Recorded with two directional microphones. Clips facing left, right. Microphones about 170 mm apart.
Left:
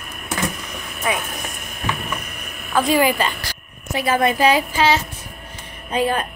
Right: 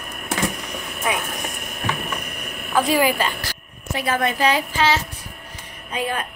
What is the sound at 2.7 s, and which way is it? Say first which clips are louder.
A woman's voice: left 1 dB; 5° right (ahead or behind).